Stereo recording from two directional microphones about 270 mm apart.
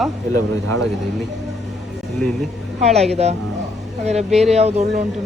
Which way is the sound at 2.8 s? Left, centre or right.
Right.